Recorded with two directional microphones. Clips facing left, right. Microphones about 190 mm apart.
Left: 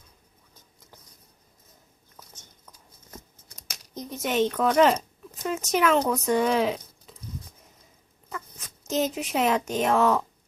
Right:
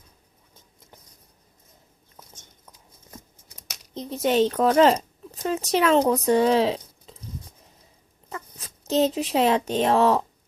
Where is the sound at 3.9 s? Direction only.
25° right (ahead or behind).